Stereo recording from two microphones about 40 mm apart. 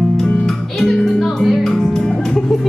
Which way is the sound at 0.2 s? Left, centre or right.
Centre.